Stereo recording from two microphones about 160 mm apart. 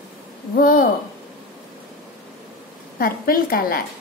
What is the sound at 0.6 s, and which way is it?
Speech, 60° left (ahead or behind).